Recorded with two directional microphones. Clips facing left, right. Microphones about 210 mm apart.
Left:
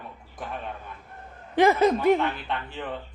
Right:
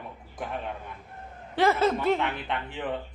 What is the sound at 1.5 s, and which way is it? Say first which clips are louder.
Speech: left 4 dB; 15° left (ahead or behind).